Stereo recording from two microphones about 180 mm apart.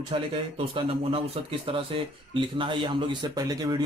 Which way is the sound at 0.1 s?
30° right (ahead or behind).